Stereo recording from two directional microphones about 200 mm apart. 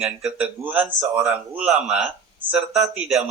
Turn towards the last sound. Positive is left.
turn(degrees=-5)  # may be behind; listen again after turning